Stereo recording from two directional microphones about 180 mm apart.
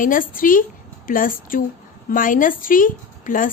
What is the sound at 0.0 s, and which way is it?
A woman's voice, 50° left (ahead or behind).